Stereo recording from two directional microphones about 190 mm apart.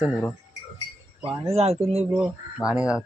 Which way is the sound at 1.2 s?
30° right (ahead or behind).